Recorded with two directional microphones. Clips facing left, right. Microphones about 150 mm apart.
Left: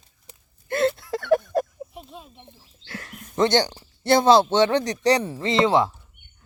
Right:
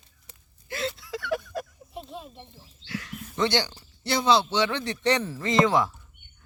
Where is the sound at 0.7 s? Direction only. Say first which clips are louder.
Left 9 dB; 55° left (ahead or behind).